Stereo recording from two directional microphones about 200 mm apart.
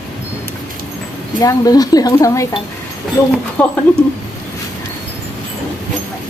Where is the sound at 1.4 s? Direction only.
15° left (ahead or behind).